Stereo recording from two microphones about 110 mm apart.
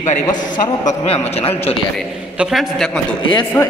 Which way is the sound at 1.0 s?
60° left (ahead or behind).